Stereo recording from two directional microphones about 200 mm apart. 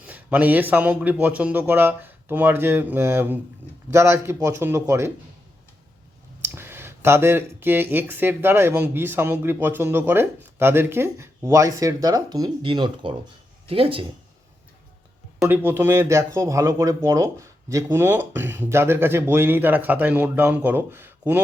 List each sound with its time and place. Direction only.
0.0 s speech: 5° right (ahead or behind)
6.4 s speech: 10° right (ahead or behind); by 14.0 s 30° right (ahead or behind)
15.4 s speech: 10° right (ahead or behind)